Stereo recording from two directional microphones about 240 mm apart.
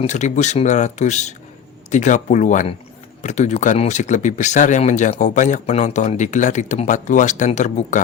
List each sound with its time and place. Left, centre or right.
0.0 s speech: left